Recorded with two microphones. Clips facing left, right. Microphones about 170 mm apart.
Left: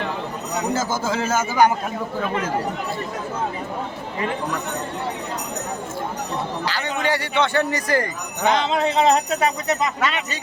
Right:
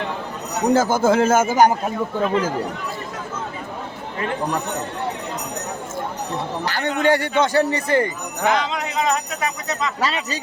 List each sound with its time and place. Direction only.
0.7 s speech: 60° right (ahead or behind)
6.7 s speech: 50° right (ahead or behind); by 8.1 s 25° right (ahead or behind)
8.4 s speech: 25° left (ahead or behind)
10.0 s speech: 35° right (ahead or behind)